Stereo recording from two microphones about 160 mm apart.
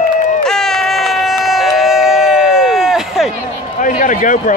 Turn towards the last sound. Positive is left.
turn(degrees=55)  # may be behind; listen again after turning